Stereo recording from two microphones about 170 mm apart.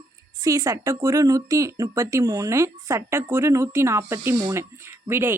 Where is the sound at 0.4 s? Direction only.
20° right (ahead or behind).